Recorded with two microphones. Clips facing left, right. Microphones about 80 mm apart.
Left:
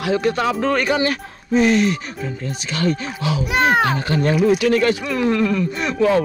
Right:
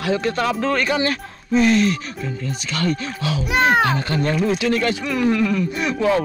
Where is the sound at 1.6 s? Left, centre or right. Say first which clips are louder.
Even; left.